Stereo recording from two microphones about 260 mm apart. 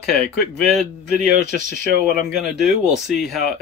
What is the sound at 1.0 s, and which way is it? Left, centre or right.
Speech, left.